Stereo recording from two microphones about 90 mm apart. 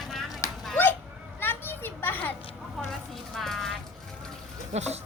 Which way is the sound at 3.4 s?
5° left (ahead or behind).